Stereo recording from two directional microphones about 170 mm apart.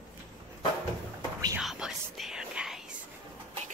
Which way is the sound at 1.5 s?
5° right (ahead or behind).